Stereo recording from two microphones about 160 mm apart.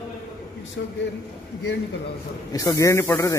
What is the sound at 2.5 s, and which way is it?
Speech, 20° left (ahead or behind).